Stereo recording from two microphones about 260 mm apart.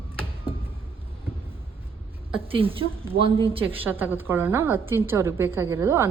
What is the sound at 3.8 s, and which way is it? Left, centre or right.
A woman's voice, centre.